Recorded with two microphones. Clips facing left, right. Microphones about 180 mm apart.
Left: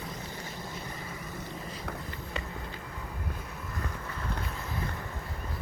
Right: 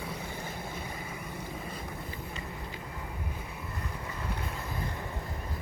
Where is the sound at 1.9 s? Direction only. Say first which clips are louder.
Left 2 dB; 70° left (ahead or behind).